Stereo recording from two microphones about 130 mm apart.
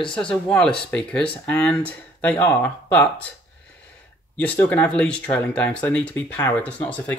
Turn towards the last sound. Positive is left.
turn(degrees=10)  # may be behind; listen again after turning